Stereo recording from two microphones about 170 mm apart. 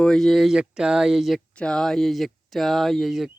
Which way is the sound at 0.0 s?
5° left (ahead or behind).